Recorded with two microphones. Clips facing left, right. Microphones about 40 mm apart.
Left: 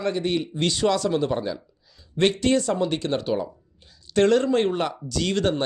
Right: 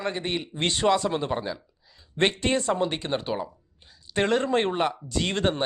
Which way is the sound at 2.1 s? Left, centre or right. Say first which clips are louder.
Left 3 dB; right.